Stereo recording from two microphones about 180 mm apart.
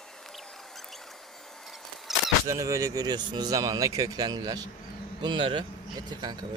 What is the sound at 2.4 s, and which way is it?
Speech, 15° right (ahead or behind).